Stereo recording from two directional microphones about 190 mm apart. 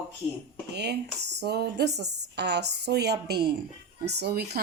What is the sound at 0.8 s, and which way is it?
A woman's voice, 60° right (ahead or behind).